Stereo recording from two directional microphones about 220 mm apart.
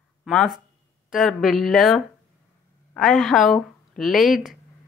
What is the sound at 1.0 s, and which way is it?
Speech, centre (ahead or behind).